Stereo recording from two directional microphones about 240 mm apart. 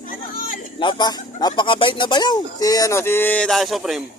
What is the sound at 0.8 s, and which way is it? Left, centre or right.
Speech, centre.